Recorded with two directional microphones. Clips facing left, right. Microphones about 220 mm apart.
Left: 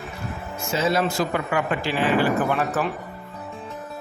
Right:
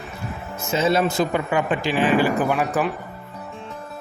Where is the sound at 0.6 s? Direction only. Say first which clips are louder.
Right 3 dB; 20° right (ahead or behind).